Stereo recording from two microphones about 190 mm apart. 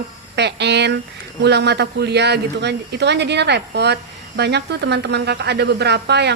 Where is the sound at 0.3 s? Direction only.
65° right (ahead or behind).